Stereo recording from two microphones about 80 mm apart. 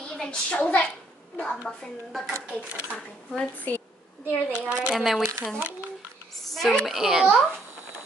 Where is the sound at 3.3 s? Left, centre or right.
Left.